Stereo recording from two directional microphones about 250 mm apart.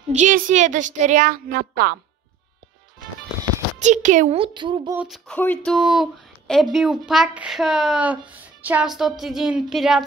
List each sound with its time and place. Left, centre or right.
0.1 s a woman's voice: right
3.8 s a woman's voice: right
4.9 s speech: centre